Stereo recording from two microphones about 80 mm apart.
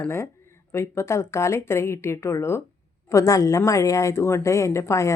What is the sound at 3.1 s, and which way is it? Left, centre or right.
A woman's voice, left.